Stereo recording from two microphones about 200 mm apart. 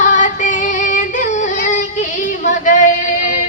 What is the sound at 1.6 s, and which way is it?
Female singing, 40° left (ahead or behind).